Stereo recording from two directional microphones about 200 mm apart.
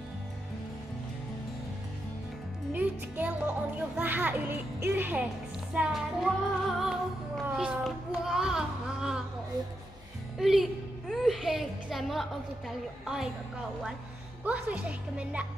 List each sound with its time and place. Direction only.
2.7 s speech: 10° right (ahead or behind)
5.7 s music: 5° right (ahead or behind)
6.8 s speech: centre (ahead or behind)
10.4 s a woman's voice: centre (ahead or behind)
14.4 s speech: 5° right (ahead or behind)